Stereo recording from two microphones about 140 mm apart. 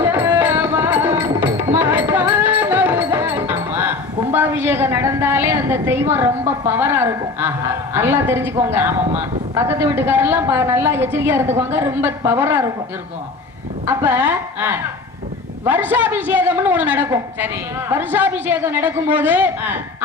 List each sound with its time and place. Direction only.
0.0 s music: 15° right (ahead or behind)
7.9 s a woman's voice: 15° right (ahead or behind)
13.8 s a woman's voice: 15° right (ahead or behind)